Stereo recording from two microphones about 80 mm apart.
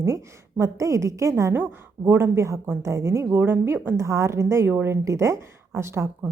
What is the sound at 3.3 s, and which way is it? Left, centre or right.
Speech, right.